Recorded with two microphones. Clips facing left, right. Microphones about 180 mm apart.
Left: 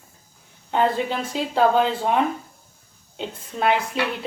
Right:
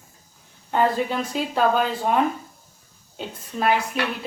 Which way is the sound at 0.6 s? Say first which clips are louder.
Even; 20° left (ahead or behind).